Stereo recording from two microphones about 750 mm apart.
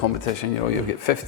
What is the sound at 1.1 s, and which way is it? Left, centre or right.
Speech, left.